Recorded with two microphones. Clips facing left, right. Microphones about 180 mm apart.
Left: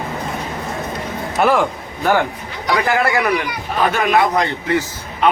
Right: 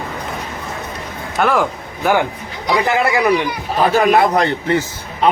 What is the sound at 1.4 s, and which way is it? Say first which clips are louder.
Speech: left 1 dB; centre (ahead or behind).